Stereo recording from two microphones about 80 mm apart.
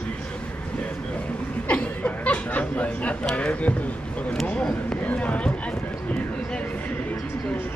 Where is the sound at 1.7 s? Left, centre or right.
Centre.